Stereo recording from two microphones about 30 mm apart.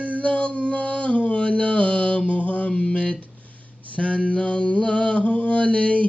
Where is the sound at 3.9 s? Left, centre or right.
Left.